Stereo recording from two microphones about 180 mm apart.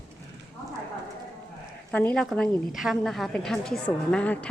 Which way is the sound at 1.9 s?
10° left (ahead or behind).